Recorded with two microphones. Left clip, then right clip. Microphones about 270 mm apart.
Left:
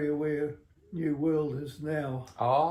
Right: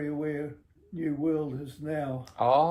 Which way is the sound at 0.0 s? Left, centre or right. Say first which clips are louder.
Left 3 dB; centre.